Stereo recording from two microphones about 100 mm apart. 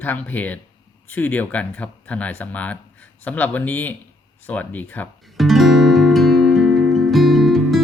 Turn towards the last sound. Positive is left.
turn(degrees=0)  # may be behind; listen again after turning